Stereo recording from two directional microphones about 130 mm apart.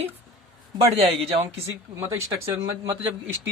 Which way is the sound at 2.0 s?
20° right (ahead or behind).